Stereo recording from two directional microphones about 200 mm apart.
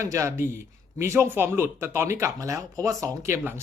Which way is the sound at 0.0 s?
15° right (ahead or behind).